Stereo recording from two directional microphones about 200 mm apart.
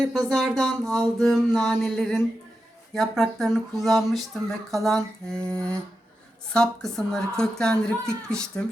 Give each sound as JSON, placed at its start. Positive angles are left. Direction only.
{"t": 0.1, "sound": "speech", "side_deg": 0}